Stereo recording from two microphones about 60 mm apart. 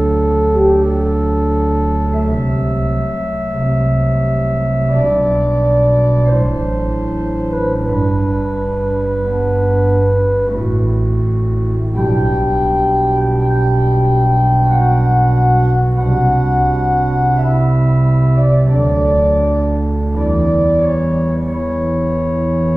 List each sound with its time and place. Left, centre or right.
0.0 s music: right
0.4 s music: centre
5.0 s organ: centre
5.9 s organ: left
14.7 s music: centre
16.2 s music: centre
19.2 s music: left